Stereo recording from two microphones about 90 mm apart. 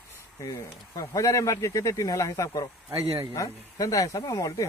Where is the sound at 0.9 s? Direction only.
40° left (ahead or behind).